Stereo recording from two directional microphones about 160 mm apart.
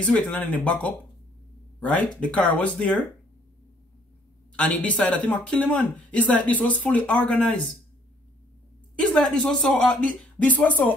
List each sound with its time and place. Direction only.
0.0 s speech: 5° left (ahead or behind)
4.6 s speech: 5° left (ahead or behind)
9.1 s speech: 5° left (ahead or behind)